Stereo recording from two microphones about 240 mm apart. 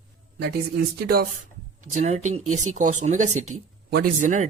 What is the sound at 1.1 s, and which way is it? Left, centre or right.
Speech, right.